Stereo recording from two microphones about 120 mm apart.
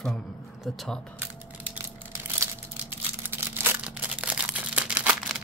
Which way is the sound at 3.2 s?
20° right (ahead or behind).